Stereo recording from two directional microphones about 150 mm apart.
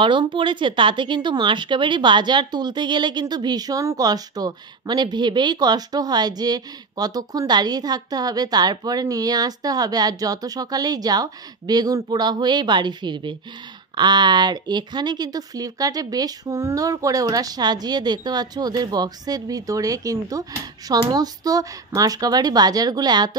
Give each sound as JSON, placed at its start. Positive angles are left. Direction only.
{"t": 0.0, "sound": "speech", "side_deg": -30}